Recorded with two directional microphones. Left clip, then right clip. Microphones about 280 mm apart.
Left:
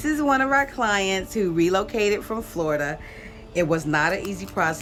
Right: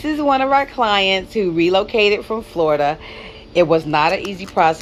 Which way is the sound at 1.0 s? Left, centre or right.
Left.